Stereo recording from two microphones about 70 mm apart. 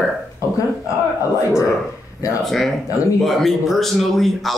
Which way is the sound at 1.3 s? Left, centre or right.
Left.